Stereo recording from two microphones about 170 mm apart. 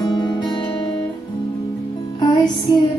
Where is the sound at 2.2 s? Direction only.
25° left (ahead or behind).